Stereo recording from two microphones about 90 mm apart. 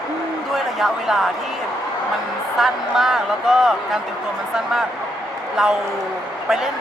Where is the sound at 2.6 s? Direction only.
5° right (ahead or behind).